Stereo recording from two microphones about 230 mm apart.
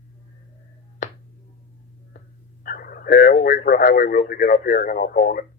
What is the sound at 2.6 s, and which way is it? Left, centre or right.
Speech, left.